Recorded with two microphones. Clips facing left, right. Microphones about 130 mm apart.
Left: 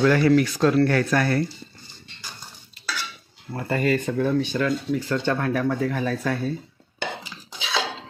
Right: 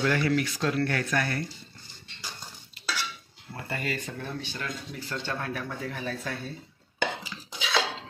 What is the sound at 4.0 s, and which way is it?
Speech, 90° left.